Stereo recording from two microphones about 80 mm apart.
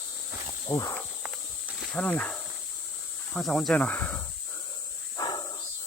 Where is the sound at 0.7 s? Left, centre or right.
Left.